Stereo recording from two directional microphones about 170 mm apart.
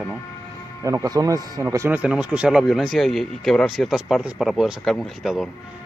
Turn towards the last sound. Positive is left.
turn(degrees=0)  # may be behind; listen again after turning